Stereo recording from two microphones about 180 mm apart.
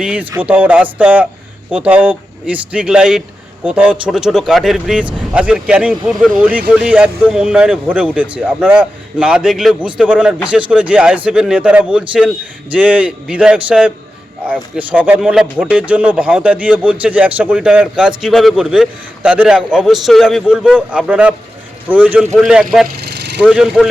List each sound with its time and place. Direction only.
0.0 s speech: 5° right (ahead or behind)
23.0 s a sound: 65° right (ahead or behind)
23.4 s speech: 5° right (ahead or behind)